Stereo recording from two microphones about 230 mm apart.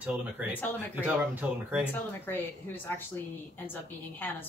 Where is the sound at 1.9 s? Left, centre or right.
Centre.